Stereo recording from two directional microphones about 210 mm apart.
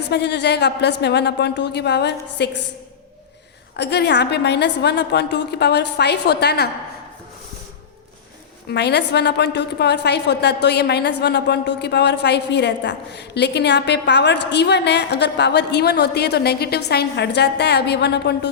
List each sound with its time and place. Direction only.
0.1 s a woman's voice: 55° left (ahead or behind)
3.8 s a woman's voice: 55° left (ahead or behind)
8.7 s a woman's voice: 55° left (ahead or behind)